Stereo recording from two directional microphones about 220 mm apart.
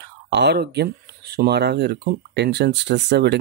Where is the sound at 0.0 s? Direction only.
50° right (ahead or behind).